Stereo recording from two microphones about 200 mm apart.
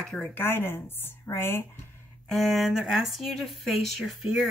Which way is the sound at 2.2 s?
Centre (ahead or behind).